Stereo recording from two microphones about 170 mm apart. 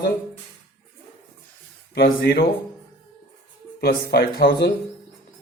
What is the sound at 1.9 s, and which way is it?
Speech, 70° left (ahead or behind).